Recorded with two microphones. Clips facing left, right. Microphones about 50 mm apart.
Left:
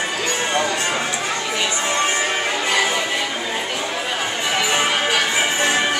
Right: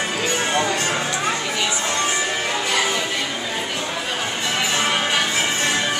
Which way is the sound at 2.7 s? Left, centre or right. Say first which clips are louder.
Left 2 dB; centre.